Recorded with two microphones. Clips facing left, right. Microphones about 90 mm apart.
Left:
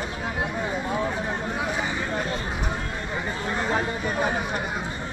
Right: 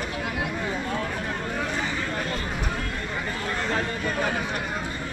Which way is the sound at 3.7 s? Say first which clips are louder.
Left 1 dB; 15° left (ahead or behind).